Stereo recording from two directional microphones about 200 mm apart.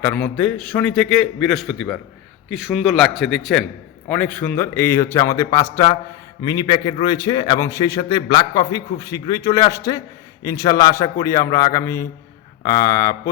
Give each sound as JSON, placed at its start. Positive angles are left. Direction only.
{"t": 0.0, "sound": "a man's voice", "side_deg": 5}